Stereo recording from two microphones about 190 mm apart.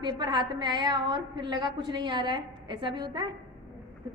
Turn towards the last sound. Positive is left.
turn(degrees=-25)  # may be behind; listen again after turning